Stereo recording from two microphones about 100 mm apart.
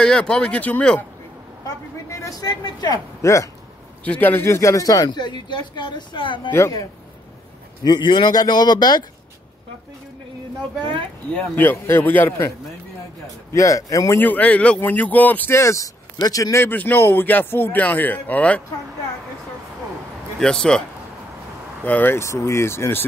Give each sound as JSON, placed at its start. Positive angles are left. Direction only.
{"t": 0.0, "sound": "speech", "side_deg": 10}
{"t": 2.0, "sound": "speech", "side_deg": 30}
{"t": 4.0, "sound": "speech", "side_deg": 15}
{"t": 7.8, "sound": "speech", "side_deg": 45}
{"t": 11.5, "sound": "speech", "side_deg": 20}
{"t": 13.5, "sound": "speech", "side_deg": 30}
{"t": 14.1, "sound": "speech", "side_deg": 15}
{"t": 16.6, "sound": "speech", "side_deg": 20}
{"t": 20.3, "sound": "speech", "side_deg": 5}
{"t": 21.8, "sound": "speech", "side_deg": 20}